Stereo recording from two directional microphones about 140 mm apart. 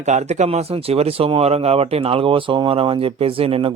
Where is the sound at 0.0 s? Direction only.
55° right (ahead or behind).